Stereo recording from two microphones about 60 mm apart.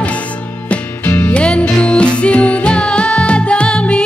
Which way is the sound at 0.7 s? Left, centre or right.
Left.